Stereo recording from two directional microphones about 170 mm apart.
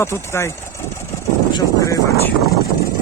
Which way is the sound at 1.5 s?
20° left (ahead or behind).